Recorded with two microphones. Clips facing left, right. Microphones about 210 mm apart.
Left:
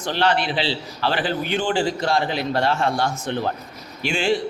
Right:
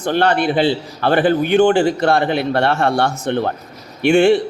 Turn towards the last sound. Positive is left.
turn(degrees=-60)  # may be behind; listen again after turning